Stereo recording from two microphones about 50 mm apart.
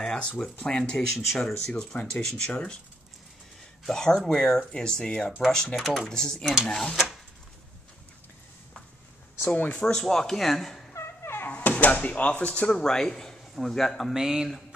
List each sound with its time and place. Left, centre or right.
0.0 s a sound: left
0.4 s speech: centre
0.9 s speech: centre
3.8 s speech: centre
5.8 s speech: centre
6.0 s speech: centre
9.6 s speech: left
9.9 s speech: centre
10.9 s a sound: left
11.5 s speech: left; by 14.1 s centre
14.1 s speech: centre